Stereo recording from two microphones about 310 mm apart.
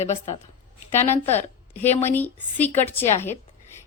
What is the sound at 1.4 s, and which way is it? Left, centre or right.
A woman's voice, centre.